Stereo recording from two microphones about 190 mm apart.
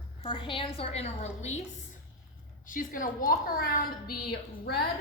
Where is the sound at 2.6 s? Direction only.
45° left (ahead or behind).